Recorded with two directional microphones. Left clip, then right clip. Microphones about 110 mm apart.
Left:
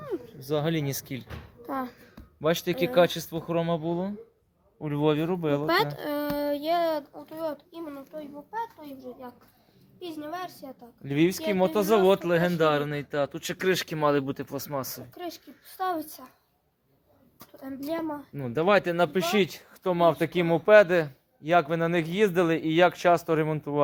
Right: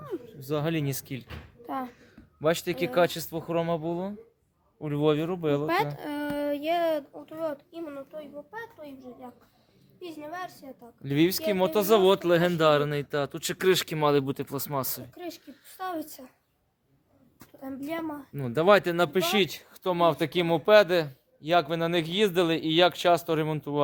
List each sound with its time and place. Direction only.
0.3 s speech: 15° right (ahead or behind)
4.8 s speech: 5° right (ahead or behind)
6.3 s a sound: 15° right (ahead or behind)
7.3 s a child's voice: 15° right (ahead or behind)
10.0 s speech: centre (ahead or behind)
11.0 s speech: 25° right (ahead or behind)
12.0 s speech: 45° right (ahead or behind)
14.7 s speech: 45° right (ahead or behind)
18.3 s speech: 30° right (ahead or behind); by 23.8 s 10° right (ahead or behind)